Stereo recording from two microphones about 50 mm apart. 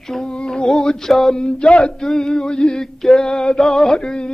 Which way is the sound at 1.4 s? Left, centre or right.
Left.